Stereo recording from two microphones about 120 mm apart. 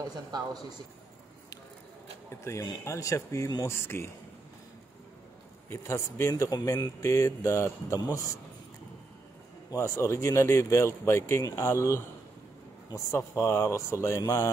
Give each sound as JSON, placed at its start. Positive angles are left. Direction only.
{"t": 0.3, "sound": "speech", "side_deg": -35}
{"t": 2.4, "sound": "speech", "side_deg": 30}
{"t": 5.7, "sound": "speech", "side_deg": 20}
{"t": 9.7, "sound": "speech", "side_deg": 25}